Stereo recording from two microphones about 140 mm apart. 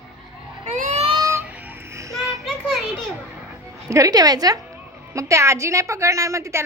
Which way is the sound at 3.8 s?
25° right (ahead or behind).